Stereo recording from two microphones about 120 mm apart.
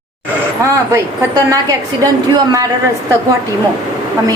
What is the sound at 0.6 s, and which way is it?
A woman's voice, 25° right (ahead or behind).